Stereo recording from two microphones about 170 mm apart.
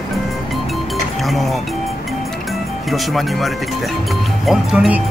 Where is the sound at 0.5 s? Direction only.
Centre (ahead or behind).